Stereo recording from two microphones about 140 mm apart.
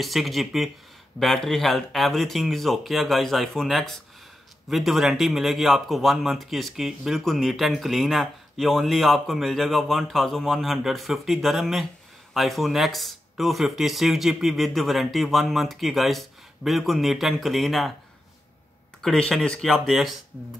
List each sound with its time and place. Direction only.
0.0 s speech: centre (ahead or behind)
18.9 s speech: centre (ahead or behind)